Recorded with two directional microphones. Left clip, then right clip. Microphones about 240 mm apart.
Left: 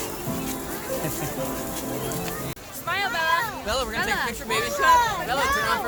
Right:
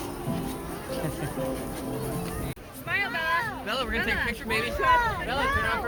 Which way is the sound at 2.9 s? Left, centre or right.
Left.